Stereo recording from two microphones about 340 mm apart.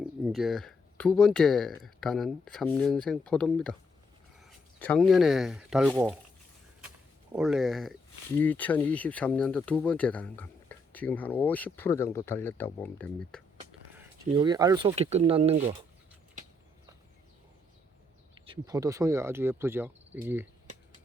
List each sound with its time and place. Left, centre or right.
0.0 s speech: centre
7.3 s speech: centre
13.9 s speech: centre
18.4 s speech: centre